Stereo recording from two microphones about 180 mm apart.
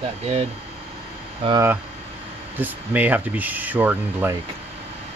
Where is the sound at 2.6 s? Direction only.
10° right (ahead or behind).